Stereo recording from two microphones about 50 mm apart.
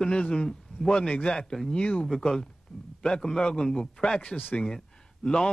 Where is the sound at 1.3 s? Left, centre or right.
Centre.